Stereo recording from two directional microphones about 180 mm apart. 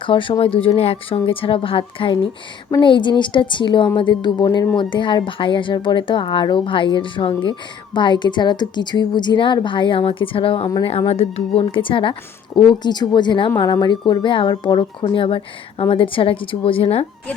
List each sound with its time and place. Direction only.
0.0 s a woman's voice: 30° left (ahead or behind)